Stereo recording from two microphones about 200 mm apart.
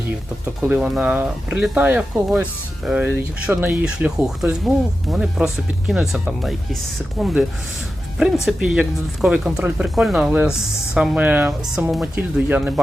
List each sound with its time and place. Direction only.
0.7 s speech: 5° right (ahead or behind)